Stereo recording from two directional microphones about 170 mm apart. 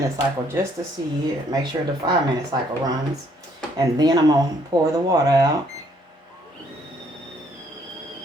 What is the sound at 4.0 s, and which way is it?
Speech, 25° right (ahead or behind).